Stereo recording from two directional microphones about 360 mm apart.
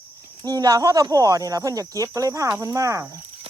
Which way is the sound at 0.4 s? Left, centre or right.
Centre.